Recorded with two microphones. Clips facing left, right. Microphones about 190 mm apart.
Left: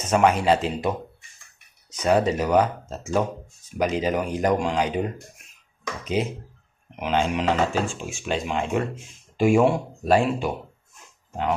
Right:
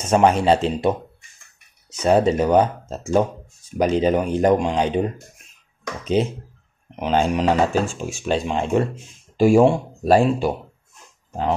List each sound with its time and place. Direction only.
0.1 s speech: 30° right (ahead or behind)
6.2 s speech: 30° right (ahead or behind)